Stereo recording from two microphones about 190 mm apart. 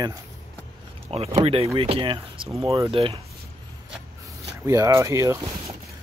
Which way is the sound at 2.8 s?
30° right (ahead or behind).